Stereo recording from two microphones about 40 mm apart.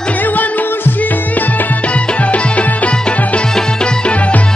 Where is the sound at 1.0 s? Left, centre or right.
Left.